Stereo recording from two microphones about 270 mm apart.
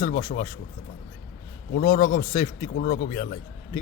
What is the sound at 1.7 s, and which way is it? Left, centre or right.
A man's voice, left.